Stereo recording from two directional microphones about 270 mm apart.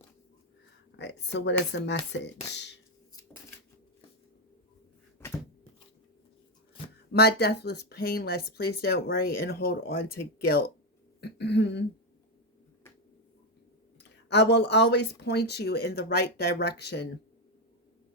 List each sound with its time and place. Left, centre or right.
0.9 s speech: left
7.1 s speech: left
14.3 s speech: left